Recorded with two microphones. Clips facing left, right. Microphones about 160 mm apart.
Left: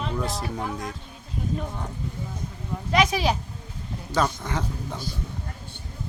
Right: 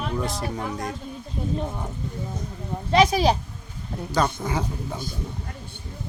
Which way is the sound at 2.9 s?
35° right (ahead or behind).